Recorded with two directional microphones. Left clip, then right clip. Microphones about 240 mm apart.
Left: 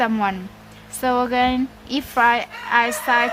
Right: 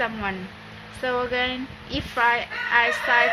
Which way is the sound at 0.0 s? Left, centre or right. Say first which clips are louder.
Left 6 dB; left.